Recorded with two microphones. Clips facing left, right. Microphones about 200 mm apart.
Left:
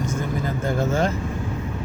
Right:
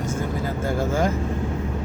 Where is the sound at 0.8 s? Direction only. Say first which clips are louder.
Even; 10° right (ahead or behind).